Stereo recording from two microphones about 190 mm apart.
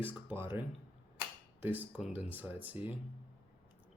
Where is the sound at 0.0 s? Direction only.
10° right (ahead or behind).